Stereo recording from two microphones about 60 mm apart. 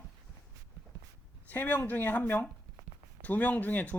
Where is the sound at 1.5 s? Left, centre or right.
Left.